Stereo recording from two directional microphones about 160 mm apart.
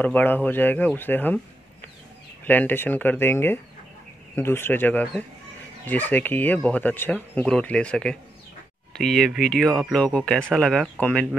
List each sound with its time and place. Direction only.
0.0 s speech: 10° left (ahead or behind)
2.4 s speech: 10° left (ahead or behind)